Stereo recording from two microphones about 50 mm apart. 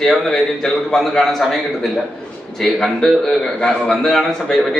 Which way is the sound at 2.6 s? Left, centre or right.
Centre.